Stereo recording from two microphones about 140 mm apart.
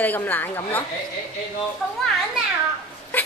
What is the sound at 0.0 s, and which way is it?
Speech, 10° left (ahead or behind).